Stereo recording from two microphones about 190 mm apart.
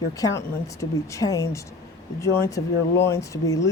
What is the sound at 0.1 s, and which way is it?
Speech, 15° left (ahead or behind).